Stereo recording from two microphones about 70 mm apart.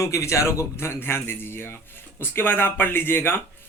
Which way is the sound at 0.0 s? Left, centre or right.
Left.